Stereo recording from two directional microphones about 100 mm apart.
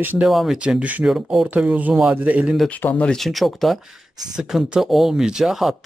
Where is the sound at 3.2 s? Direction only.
Centre (ahead or behind).